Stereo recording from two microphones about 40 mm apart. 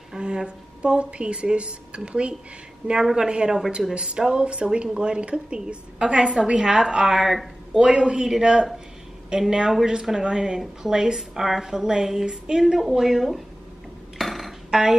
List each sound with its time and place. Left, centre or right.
0.1 s a woman's voice: centre
7.2 s speech: centre
7.8 s a woman's voice: right; by 13.4 s centre
14.1 s music: centre
14.7 s speech: centre